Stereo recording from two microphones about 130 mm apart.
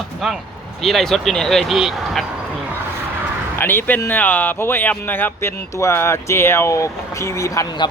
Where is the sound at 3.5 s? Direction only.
15° left (ahead or behind).